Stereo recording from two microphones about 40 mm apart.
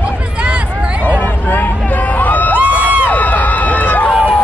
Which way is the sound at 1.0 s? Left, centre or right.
Left.